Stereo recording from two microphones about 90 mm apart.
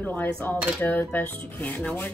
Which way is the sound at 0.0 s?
20° left (ahead or behind).